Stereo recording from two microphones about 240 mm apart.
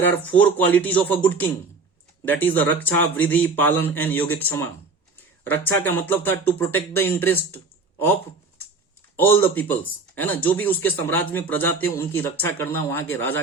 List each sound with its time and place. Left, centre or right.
0.1 s a man's voice: centre
5.6 s a man's voice: centre
9.1 s a man's voice: centre